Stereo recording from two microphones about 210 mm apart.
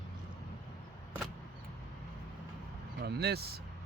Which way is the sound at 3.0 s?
50° right (ahead or behind).